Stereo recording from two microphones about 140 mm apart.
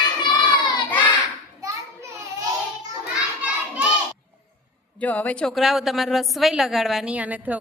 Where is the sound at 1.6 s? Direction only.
20° right (ahead or behind).